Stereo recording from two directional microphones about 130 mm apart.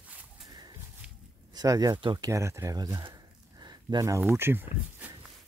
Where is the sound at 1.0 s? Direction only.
10° right (ahead or behind).